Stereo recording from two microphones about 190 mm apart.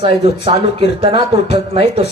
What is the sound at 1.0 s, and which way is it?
Speech, 60° left (ahead or behind).